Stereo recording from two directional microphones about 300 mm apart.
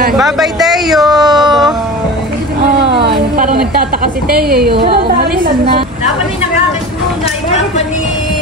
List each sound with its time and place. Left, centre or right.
0.2 s speech: centre
3.1 s a sound: right
4.3 s a woman's voice: right